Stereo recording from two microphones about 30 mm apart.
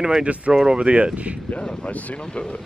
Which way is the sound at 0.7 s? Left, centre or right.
Right.